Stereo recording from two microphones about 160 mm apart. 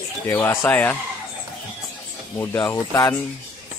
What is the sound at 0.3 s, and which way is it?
Speech, 15° left (ahead or behind).